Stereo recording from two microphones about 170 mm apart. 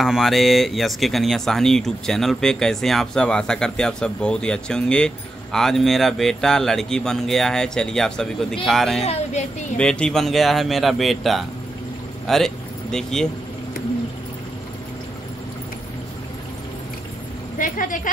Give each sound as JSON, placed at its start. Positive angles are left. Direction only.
{"t": 0.0, "sound": "speech", "side_deg": 0}
{"t": 9.0, "sound": "speech", "side_deg": 40}
{"t": 9.8, "sound": "speech", "side_deg": 5}
{"t": 17.6, "sound": "a sound", "side_deg": 50}